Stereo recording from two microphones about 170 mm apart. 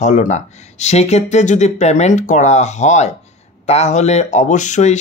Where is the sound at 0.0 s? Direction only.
45° left (ahead or behind).